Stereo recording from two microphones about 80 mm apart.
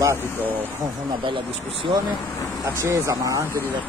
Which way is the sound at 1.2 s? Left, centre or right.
Right.